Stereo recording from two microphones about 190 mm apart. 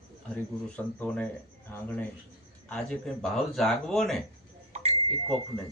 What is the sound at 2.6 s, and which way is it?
Speech, 5° left (ahead or behind).